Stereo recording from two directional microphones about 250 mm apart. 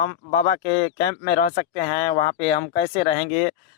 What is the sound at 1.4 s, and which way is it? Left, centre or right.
Speech, left.